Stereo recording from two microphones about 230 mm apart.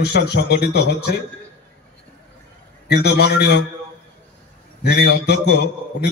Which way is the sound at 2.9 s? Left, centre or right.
Left.